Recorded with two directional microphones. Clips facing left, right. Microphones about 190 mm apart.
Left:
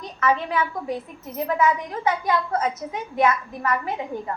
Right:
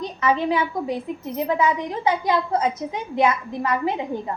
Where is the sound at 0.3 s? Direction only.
30° right (ahead or behind).